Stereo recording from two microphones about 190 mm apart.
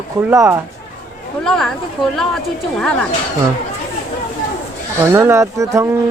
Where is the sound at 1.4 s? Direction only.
Centre (ahead or behind).